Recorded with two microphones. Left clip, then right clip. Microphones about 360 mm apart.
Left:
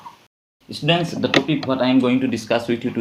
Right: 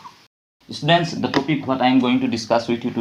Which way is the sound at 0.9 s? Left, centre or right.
Centre.